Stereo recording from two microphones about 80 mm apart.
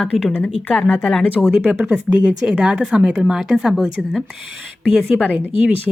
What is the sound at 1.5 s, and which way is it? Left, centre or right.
A woman's voice, right.